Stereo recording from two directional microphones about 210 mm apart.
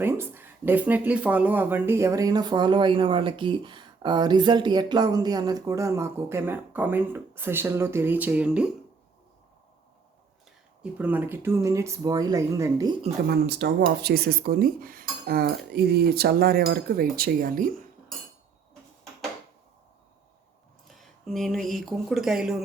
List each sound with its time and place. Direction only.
0.0 s speech: 10° right (ahead or behind)
10.9 s speech: 10° right (ahead or behind)
13.2 s speech: 50° right (ahead or behind)
20.8 s speech: centre (ahead or behind)